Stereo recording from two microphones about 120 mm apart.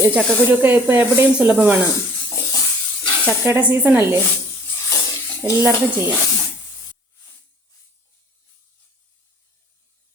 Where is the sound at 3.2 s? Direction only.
15° right (ahead or behind).